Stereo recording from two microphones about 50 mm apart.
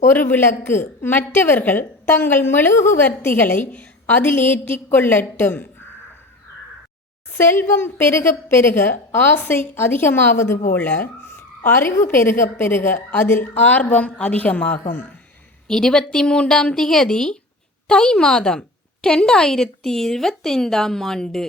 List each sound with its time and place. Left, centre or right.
0.1 s a woman's voice: left
4.3 s a woman's voice: left
7.3 s a woman's voice: left
11.6 s a woman's voice: left
13.6 s a woman's voice: left
15.6 s speech: centre